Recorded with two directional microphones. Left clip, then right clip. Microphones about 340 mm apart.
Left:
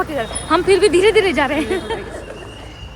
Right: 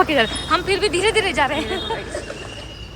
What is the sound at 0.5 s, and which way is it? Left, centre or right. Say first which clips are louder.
Speech: left 8 dB; centre.